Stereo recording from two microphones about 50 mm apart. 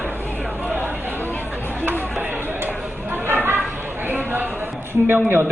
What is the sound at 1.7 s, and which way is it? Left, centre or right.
Chatter, right.